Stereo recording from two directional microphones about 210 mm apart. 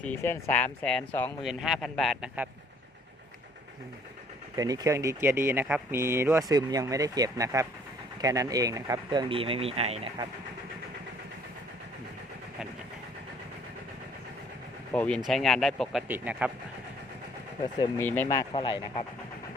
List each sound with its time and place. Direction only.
0.0 s speech: 10° left (ahead or behind); by 2.5 s 5° right (ahead or behind)
4.5 s speech: 15° right (ahead or behind)
14.9 s speech: 5° left (ahead or behind)
17.7 s speech: 10° left (ahead or behind)